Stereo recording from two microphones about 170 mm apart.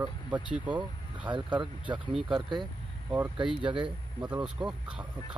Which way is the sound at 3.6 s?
30° right (ahead or behind).